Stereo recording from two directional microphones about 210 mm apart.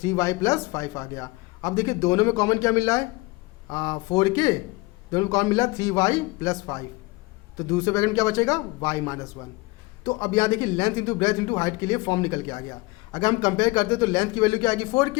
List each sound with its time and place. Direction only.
0.0 s a man's voice: 15° left (ahead or behind)